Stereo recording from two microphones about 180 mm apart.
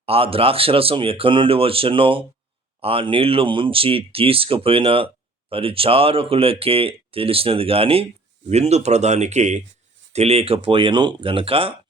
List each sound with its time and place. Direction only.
0.0 s speech: 30° right (ahead or behind)